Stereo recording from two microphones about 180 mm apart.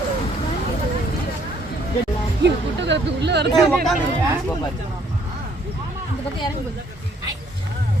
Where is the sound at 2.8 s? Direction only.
75° right (ahead or behind).